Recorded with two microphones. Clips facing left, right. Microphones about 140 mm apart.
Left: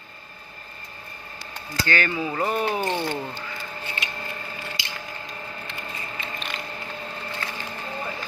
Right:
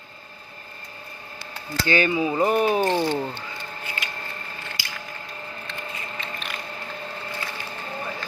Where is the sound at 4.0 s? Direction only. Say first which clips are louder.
Left 1 dB; 25° left (ahead or behind).